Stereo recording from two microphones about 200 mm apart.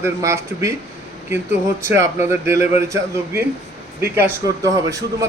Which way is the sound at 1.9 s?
15° right (ahead or behind).